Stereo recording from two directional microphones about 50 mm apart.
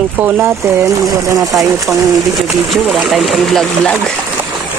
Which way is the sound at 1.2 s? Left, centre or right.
Right.